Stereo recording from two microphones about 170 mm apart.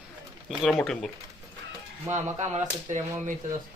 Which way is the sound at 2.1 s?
15° right (ahead or behind).